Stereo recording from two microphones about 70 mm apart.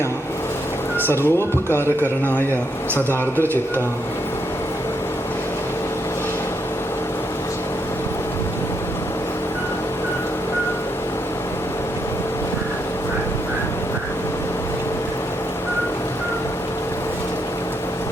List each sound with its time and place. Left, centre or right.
0.9 s speech: left
2.9 s speech: left